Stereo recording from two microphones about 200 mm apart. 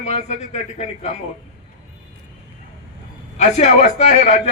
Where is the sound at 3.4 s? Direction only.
35° left (ahead or behind).